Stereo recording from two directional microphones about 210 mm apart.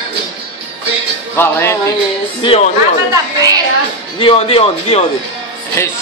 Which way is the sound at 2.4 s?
25° left (ahead or behind).